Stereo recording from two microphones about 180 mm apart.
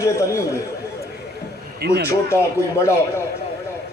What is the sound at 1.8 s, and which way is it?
Speech, 65° right (ahead or behind).